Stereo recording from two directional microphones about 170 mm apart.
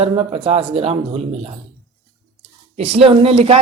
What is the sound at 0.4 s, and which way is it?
Speech, 35° right (ahead or behind).